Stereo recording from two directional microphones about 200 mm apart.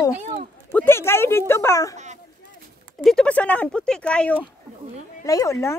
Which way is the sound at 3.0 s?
5° left (ahead or behind).